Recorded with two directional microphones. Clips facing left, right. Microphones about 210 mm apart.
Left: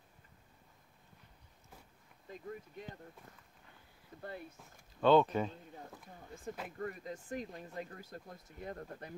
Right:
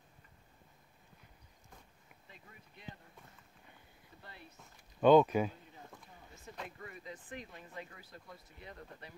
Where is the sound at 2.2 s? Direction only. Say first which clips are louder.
Left 15 dB; 45° left (ahead or behind).